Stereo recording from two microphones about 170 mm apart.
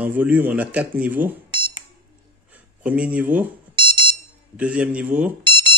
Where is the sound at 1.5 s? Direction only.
25° right (ahead or behind).